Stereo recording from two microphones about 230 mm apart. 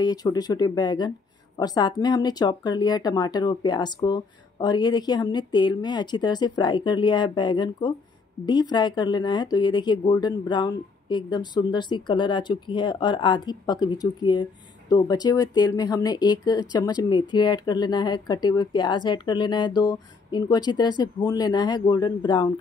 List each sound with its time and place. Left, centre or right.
0.0 s speech: centre